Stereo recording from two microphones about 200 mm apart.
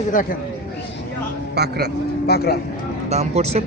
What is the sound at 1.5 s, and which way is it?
Speech, 55° right (ahead or behind).